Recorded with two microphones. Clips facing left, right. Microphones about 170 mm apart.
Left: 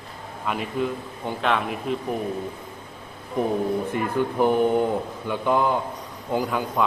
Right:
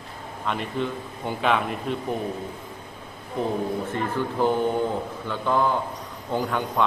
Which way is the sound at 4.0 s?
15° left (ahead or behind).